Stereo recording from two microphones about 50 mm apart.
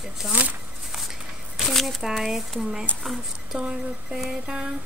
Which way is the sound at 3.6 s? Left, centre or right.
Centre.